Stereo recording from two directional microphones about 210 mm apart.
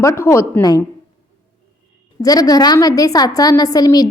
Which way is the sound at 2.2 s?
15° left (ahead or behind).